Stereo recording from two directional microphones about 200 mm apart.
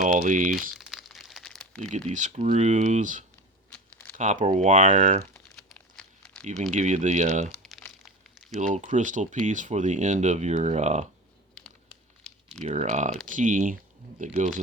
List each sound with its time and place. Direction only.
0.0 s speech: 40° right (ahead or behind)
0.7 s crumpling: centre (ahead or behind)
1.9 s speech: 40° right (ahead or behind)
5.5 s crumpling: 5° left (ahead or behind)
6.6 s speech: 35° right (ahead or behind)
7.5 s crumpling: centre (ahead or behind)
8.6 s speech: 40° right (ahead or behind)
11.5 s crumpling: 5° left (ahead or behind)
12.6 s speech: 35° right (ahead or behind)